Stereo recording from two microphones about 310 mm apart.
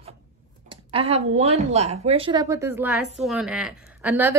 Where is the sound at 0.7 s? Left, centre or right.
Centre.